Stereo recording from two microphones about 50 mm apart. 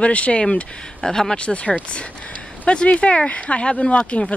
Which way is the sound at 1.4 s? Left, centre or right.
Left.